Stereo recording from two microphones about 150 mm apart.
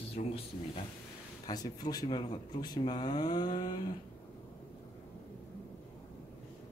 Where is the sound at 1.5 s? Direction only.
25° left (ahead or behind).